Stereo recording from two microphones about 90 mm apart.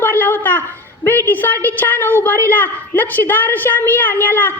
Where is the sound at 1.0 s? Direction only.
25° left (ahead or behind).